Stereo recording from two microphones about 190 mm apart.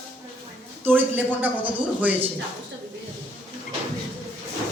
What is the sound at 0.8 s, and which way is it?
Speech, 10° right (ahead or behind).